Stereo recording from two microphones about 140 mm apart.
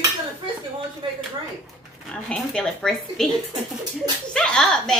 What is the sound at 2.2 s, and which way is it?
A child's voice, 5° left (ahead or behind).